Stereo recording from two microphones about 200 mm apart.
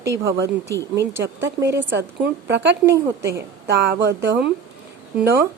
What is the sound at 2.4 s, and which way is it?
Speech, 60° right (ahead or behind).